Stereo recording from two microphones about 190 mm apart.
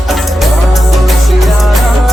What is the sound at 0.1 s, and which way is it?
Music, centre (ahead or behind).